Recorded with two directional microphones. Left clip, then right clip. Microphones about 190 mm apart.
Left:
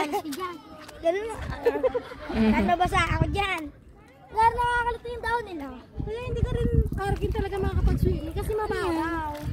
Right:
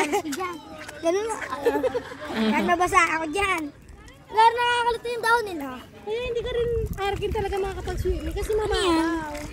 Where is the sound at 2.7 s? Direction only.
35° right (ahead or behind).